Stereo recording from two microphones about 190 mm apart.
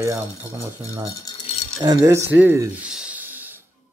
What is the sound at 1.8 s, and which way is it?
Speech, 20° right (ahead or behind).